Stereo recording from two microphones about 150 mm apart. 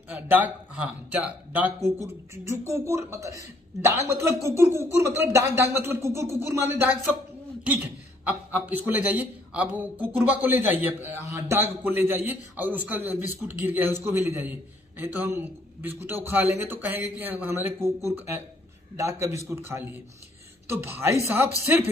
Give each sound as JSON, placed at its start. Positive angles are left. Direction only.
{"t": 0.1, "sound": "a man's voice", "side_deg": -10}
{"t": 8.6, "sound": "a man's voice", "side_deg": -10}